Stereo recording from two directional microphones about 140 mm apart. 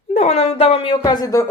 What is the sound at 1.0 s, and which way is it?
Speech, 25° left (ahead or behind).